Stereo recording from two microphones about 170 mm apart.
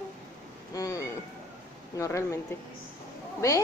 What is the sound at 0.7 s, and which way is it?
Cat, 20° left (ahead or behind).